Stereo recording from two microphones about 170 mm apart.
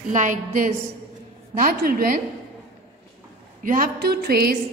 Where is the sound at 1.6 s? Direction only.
60° right (ahead or behind).